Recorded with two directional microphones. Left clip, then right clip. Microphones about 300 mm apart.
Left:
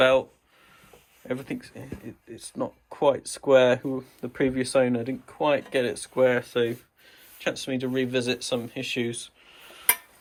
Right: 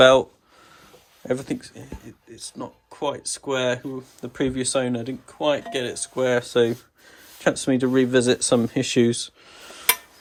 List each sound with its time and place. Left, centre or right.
0.0 s speech: right
1.3 s speech: centre